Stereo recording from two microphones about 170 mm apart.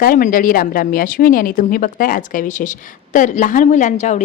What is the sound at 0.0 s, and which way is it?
Speech, 55° left (ahead or behind).